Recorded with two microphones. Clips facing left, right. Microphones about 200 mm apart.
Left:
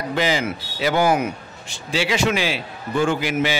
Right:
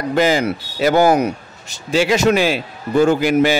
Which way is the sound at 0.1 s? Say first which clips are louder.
Right 6 dB; 45° right (ahead or behind).